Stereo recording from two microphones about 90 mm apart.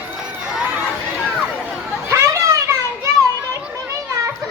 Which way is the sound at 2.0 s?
30° right (ahead or behind).